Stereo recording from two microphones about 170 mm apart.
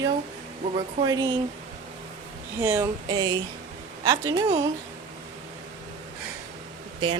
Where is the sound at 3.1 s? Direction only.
25° right (ahead or behind).